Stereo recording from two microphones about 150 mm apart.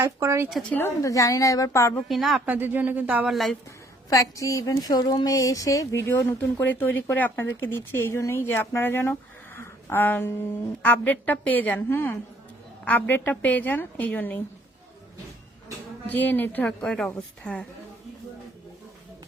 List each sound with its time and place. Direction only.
0.0 s speech: 20° right (ahead or behind)
0.7 s a woman's voice: 15° left (ahead or behind)
2.0 s a woman's voice: centre (ahead or behind)
2.6 s speech: 10° right (ahead or behind)
4.1 s a woman's voice: 20° left (ahead or behind)
9.6 s a sound: 15° left (ahead or behind)
10.8 s a woman's voice: 10° left (ahead or behind)
16.0 s a woman's voice: 10° left (ahead or behind)